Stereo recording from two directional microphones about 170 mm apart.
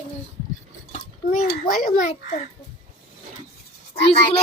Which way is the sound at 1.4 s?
55° left (ahead or behind).